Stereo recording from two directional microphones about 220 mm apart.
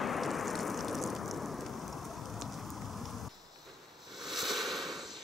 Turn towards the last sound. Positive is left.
turn(degrees=0)  # may be behind; listen again after turning